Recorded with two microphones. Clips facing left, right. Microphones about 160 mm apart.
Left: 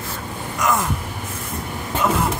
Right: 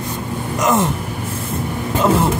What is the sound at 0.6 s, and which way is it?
Speech, 25° right (ahead or behind).